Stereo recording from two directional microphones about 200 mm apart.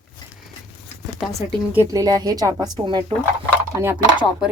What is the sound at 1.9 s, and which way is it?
A woman's voice, 20° right (ahead or behind).